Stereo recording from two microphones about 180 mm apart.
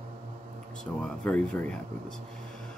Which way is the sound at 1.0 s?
5° left (ahead or behind).